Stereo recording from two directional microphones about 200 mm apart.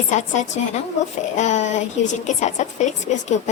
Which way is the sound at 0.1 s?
35° left (ahead or behind).